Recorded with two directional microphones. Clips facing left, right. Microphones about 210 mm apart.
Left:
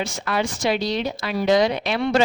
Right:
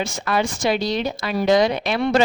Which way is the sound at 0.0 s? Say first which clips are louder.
Right 2 dB; 45° right (ahead or behind).